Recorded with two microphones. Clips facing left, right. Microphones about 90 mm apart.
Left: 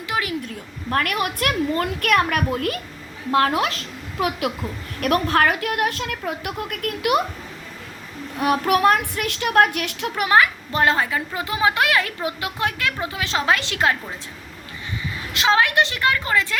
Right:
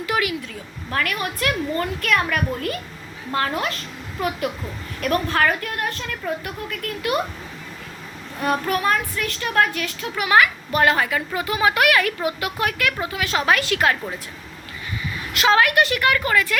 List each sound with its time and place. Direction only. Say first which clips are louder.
0.9 s a child's voice: left 3 dB; 50° left (ahead or behind)
8.4 s a woman's voice: left 4 dB; 70° left (ahead or behind)
10.2 s a woman's voice: even; 30° left (ahead or behind)
15.3 s a woman's voice: right 1 dB; 20° left (ahead or behind)